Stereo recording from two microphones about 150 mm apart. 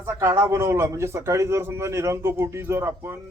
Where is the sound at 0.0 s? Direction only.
20° right (ahead or behind).